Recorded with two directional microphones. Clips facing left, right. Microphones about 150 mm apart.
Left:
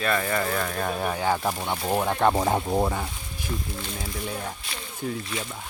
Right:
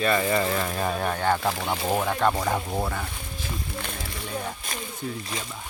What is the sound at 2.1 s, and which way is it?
Speech, 25° left (ahead or behind).